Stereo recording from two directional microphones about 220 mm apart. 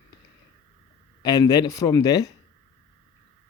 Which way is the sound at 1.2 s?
15° left (ahead or behind).